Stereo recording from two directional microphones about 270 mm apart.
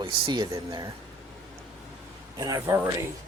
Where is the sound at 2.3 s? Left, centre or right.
Centre.